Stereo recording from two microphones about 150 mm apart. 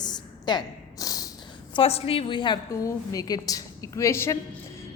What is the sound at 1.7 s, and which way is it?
A woman's voice, 40° left (ahead or behind).